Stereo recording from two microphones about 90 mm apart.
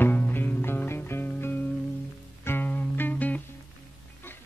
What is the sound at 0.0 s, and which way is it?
Music, 20° left (ahead or behind).